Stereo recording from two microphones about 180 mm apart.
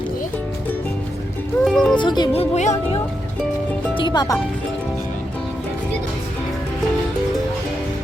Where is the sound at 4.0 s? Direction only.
25° left (ahead or behind).